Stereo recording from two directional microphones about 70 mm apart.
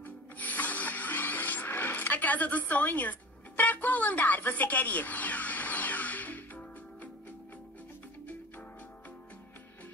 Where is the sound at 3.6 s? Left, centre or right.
Left.